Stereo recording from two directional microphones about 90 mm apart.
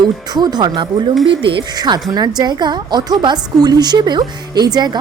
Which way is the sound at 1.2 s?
75° right (ahead or behind).